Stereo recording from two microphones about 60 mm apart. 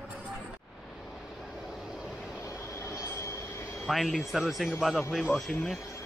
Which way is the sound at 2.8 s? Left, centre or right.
Left.